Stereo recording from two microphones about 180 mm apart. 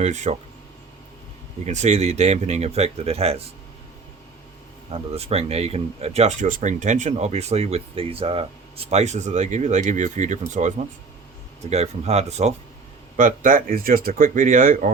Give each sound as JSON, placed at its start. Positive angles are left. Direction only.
{"t": 0.0, "sound": "speech", "side_deg": -40}
{"t": 1.6, "sound": "speech", "side_deg": -40}
{"t": 4.9, "sound": "speech", "side_deg": -35}
{"t": 13.1, "sound": "speech", "side_deg": -50}